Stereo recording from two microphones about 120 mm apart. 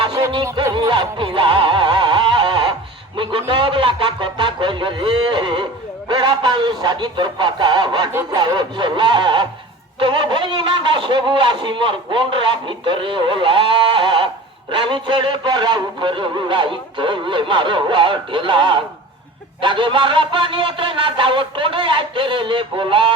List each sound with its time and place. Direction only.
0.0 s music: 35° right (ahead or behind)
3.5 s a man's voice: 45° right (ahead or behind)